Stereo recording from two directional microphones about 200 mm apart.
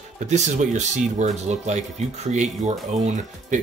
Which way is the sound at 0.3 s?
35° right (ahead or behind).